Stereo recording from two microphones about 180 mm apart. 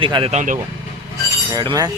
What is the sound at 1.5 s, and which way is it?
Speech, 20° right (ahead or behind).